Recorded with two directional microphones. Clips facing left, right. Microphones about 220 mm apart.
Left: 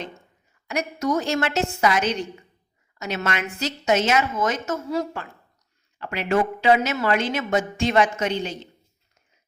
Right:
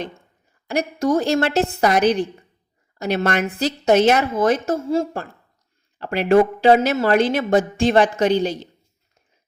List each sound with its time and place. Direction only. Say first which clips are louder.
0.7 s a woman's voice: right 5 dB; 30° right (ahead or behind)